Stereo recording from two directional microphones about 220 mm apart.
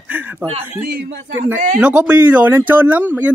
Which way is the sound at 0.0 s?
10° right (ahead or behind).